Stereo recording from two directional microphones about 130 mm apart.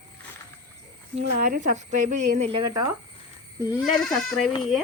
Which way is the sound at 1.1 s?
70° right (ahead or behind).